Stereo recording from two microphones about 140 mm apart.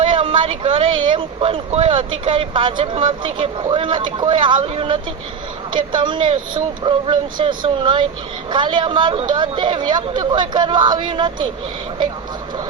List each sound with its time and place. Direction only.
0.1 s speech: 40° right (ahead or behind)